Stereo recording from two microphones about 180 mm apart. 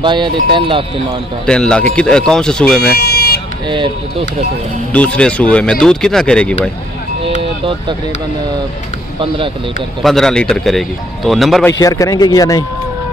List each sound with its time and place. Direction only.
0.0 s speech: 25° right (ahead or behind)
1.4 s speech: 5° left (ahead or behind)
2.9 s car alarm: 60° left (ahead or behind)
3.6 s speech: 25° right (ahead or behind)
4.9 s speech: 5° left (ahead or behind)
7.2 s vehicle: 30° right (ahead or behind)
10.0 s speech: 5° left (ahead or behind)
11.6 s a man's voice: 20° left (ahead or behind)